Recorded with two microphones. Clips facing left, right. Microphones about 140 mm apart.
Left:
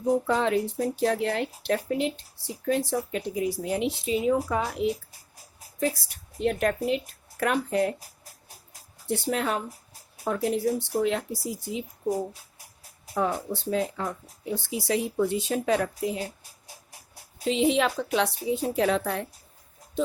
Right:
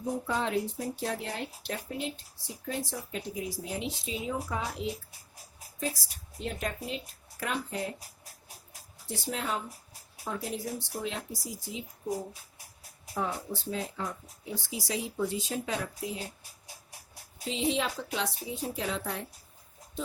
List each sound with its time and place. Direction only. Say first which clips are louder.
0.3 s speech: left 6 dB; 85° left; by 4.9 s 65° left (ahead or behind)
6.0 s speech: left 11 dB; 55° left (ahead or behind)
9.0 s speech: left 7 dB; 60° left (ahead or behind)
13.1 s speech: left 6 dB; 60° left (ahead or behind)
17.4 s speech: left 7 dB; 70° left (ahead or behind)